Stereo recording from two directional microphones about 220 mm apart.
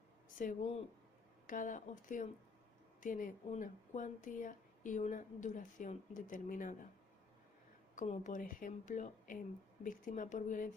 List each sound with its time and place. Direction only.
0.3 s speech: 35° left (ahead or behind)
7.9 s speech: 35° left (ahead or behind)